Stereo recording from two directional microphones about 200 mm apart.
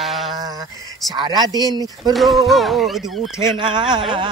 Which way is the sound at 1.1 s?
20° right (ahead or behind).